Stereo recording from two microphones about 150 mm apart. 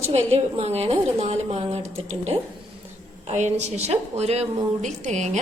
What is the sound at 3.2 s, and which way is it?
A woman's voice, 50° right (ahead or behind).